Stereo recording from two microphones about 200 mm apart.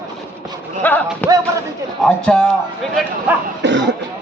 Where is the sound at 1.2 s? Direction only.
10° left (ahead or behind).